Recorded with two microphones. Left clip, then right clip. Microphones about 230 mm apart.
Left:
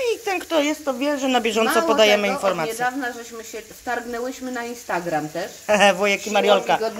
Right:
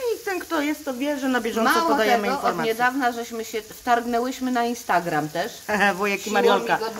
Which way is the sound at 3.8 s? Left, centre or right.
Right.